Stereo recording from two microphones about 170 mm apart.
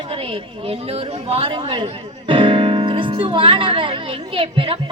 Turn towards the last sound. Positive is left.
turn(degrees=-30)  # may be behind; listen again after turning